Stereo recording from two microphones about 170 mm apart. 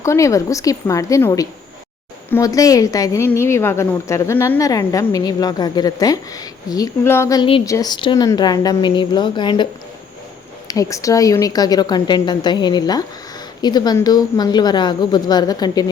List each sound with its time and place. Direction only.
0.0 s a woman's voice: 20° left (ahead or behind)
10.7 s a woman's voice: 20° left (ahead or behind)